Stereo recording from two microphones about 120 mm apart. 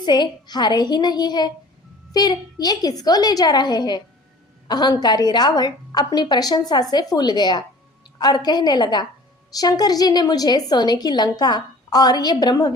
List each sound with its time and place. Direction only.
0.0 s a woman's voice: 35° left (ahead or behind)